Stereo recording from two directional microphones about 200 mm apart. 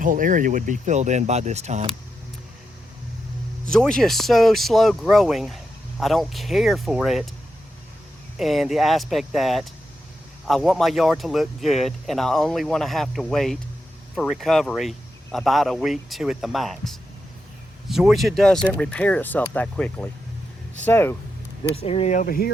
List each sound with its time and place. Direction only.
0.0 s speech: 40° right (ahead or behind)
3.7 s speech: 5° left (ahead or behind)
8.4 s speech: centre (ahead or behind)
21.6 s speech: 30° left (ahead or behind); by 22.5 s 50° left (ahead or behind)